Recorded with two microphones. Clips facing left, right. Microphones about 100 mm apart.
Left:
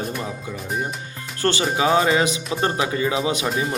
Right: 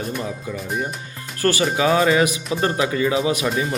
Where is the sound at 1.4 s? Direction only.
25° left (ahead or behind).